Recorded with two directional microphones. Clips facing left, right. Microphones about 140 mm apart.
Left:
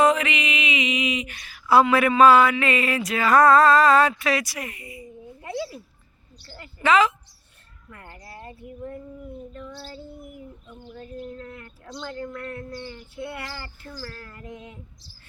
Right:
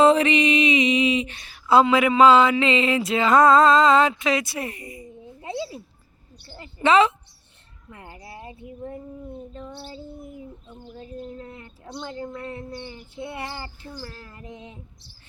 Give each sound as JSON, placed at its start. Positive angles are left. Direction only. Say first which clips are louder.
{"t": 0.0, "sound": "speech", "louder": "right 4 dB", "side_deg": -30}
{"t": 5.4, "sound": "a sound", "louder": "even", "side_deg": -25}
{"t": 8.2, "sound": "speech", "louder": "even", "side_deg": -20}